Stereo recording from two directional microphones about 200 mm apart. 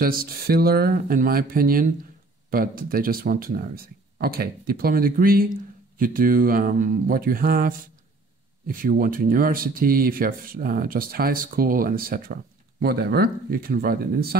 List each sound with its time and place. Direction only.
0.0 s speech: 45° right (ahead or behind)